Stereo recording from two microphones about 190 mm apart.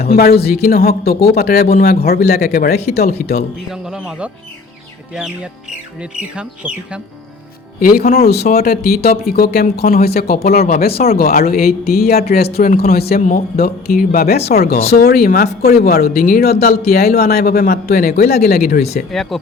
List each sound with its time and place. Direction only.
0.0 s speech: 55° left (ahead or behind)
3.7 s speech: 5° right (ahead or behind)
7.8 s speech: 55° left (ahead or behind)
19.1 s speech: centre (ahead or behind)